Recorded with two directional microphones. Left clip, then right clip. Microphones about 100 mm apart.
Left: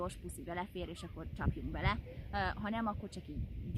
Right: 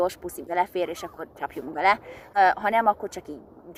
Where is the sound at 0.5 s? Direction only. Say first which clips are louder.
Right 18 dB; 15° left (ahead or behind).